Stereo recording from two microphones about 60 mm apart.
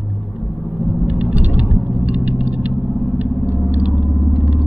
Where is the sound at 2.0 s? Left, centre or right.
Right.